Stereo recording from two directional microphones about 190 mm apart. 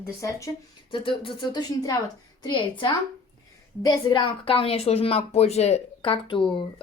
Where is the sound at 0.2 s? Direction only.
15° left (ahead or behind).